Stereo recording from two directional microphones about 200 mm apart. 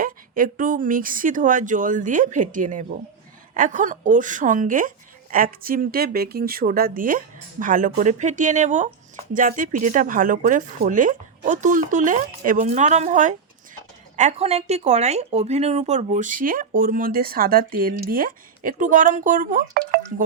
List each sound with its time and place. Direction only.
0.0 s speech: 45° right (ahead or behind)